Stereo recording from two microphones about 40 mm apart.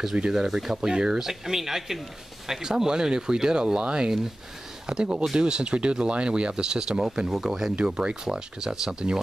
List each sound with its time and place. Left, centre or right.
0.3 s speech: centre
7.8 s speech: right